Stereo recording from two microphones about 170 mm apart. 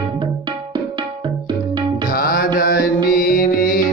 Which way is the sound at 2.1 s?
60° left (ahead or behind).